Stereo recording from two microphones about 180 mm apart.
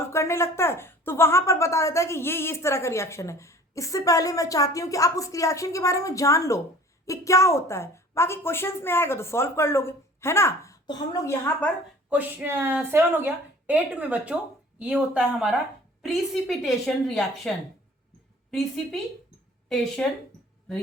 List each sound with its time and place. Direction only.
0.1 s speech: 15° left (ahead or behind)
12.1 s a woman's voice: 10° right (ahead or behind)
19.6 s speech: 5° left (ahead or behind)